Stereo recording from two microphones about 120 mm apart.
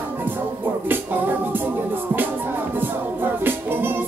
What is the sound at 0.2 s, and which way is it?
Music, 15° right (ahead or behind).